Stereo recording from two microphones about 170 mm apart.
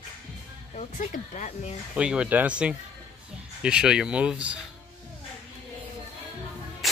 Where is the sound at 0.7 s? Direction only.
50° left (ahead or behind).